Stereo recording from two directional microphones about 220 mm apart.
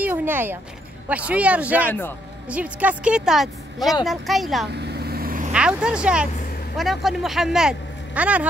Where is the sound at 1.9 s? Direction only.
10° left (ahead or behind).